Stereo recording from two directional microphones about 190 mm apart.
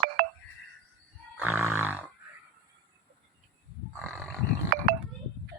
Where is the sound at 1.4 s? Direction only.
10° right (ahead or behind).